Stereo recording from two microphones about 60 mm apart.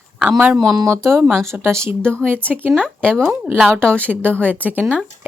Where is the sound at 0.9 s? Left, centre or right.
Right.